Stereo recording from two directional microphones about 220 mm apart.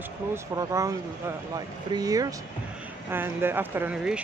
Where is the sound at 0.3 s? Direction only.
15° right (ahead or behind).